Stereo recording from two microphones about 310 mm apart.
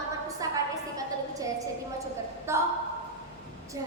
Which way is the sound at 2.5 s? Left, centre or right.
Centre.